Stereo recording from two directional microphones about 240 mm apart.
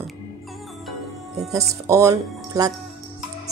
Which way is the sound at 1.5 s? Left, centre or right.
Centre.